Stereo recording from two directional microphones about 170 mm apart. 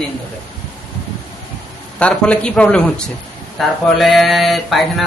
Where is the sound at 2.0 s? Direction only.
5° left (ahead or behind).